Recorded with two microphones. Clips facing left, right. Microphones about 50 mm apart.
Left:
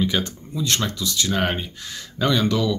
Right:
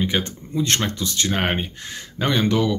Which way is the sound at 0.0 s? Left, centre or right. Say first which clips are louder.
Even; right.